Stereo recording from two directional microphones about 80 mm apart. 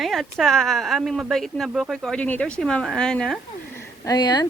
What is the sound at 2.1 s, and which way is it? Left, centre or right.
Speech, centre.